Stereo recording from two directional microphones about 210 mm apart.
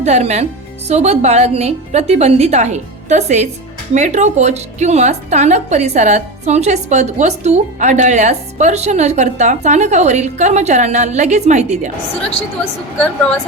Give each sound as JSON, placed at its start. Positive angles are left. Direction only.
{"t": 0.0, "sound": "a woman's voice", "side_deg": -30}